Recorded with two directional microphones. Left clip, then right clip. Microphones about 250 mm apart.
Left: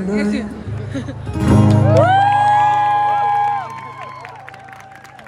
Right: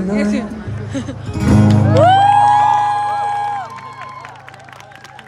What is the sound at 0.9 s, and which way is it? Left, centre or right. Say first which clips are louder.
Music: right 1 dB; centre.